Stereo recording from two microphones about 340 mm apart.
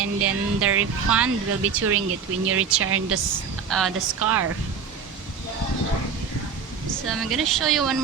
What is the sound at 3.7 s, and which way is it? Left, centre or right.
Speech, centre.